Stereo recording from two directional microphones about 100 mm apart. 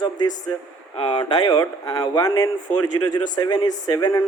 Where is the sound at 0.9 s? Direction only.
60° left (ahead or behind).